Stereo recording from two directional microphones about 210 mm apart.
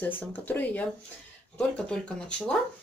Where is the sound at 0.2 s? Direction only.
10° left (ahead or behind).